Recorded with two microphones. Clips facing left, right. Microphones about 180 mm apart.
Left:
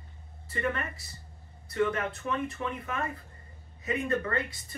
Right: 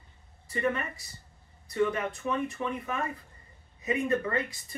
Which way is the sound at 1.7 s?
10° right (ahead or behind).